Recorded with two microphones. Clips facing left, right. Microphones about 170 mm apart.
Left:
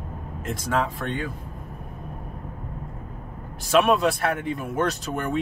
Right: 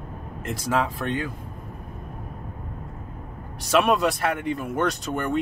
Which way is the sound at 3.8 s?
Centre (ahead or behind).